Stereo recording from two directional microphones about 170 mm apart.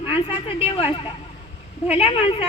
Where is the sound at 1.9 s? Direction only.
35° left (ahead or behind).